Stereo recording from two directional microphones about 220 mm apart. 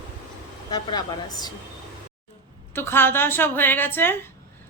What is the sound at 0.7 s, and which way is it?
Speech, 20° left (ahead or behind).